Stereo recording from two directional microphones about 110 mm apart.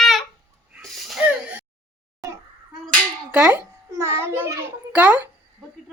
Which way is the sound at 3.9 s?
25° right (ahead or behind).